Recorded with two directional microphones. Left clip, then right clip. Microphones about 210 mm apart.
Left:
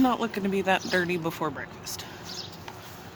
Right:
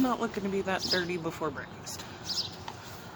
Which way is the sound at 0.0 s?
40° left (ahead or behind).